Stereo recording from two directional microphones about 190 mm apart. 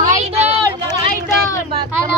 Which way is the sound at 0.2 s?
35° right (ahead or behind).